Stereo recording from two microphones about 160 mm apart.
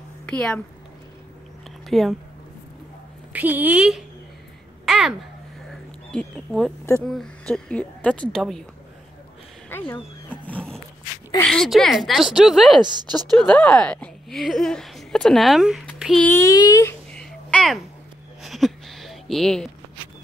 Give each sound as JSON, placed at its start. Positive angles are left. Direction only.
{"t": 0.3, "sound": "speech", "side_deg": 5}
{"t": 1.9, "sound": "a woman's voice", "side_deg": 0}
{"t": 3.3, "sound": "a woman's voice", "side_deg": -10}
{"t": 4.8, "sound": "babbling", "side_deg": 0}
{"t": 5.7, "sound": "a sound", "side_deg": 0}
{"t": 7.1, "sound": "a woman's voice", "side_deg": 5}
{"t": 9.7, "sound": "roaring cats", "side_deg": 15}
{"t": 11.4, "sound": "a woman's voice", "side_deg": 5}
{"t": 12.8, "sound": "speech", "side_deg": -25}
{"t": 13.3, "sound": "speech", "side_deg": 5}
{"t": 16.3, "sound": "speech", "side_deg": 20}
{"t": 17.1, "sound": "a sound", "side_deg": 5}